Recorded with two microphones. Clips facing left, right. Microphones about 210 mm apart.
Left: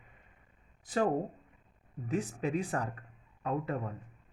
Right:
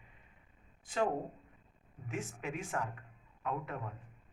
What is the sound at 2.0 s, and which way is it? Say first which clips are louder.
Speech: left 7 dB; 35° left (ahead or behind).